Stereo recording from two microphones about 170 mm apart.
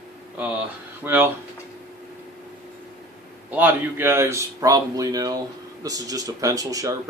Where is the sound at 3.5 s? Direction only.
10° right (ahead or behind).